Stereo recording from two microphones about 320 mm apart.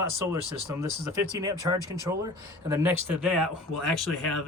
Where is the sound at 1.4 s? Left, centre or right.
Centre.